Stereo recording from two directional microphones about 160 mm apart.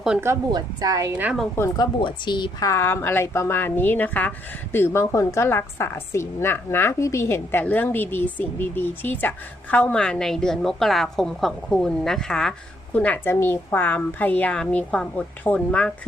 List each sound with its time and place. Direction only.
0.2 s speech: 20° right (ahead or behind)
1.1 s a woman's voice: 10° right (ahead or behind)
1.5 s a woman's voice: 20° left (ahead or behind)